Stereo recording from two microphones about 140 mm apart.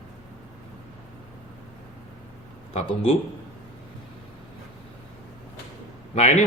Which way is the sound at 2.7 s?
45° left (ahead or behind).